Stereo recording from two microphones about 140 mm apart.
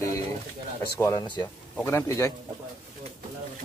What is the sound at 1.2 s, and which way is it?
Speech, 30° left (ahead or behind).